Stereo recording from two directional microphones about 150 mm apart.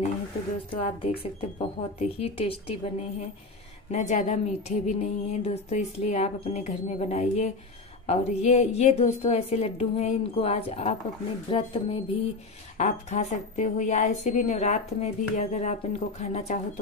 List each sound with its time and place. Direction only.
0.7 s a woman's voice: 40° left (ahead or behind)
12.7 s a woman's voice: 50° left (ahead or behind)